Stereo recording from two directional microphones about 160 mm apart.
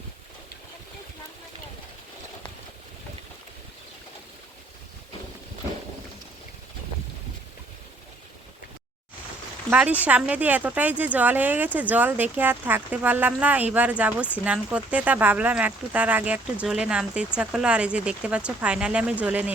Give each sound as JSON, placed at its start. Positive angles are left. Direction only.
{"t": 9.6, "sound": "speech", "side_deg": -10}